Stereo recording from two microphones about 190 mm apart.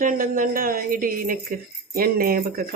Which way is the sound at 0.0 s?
50° right (ahead or behind).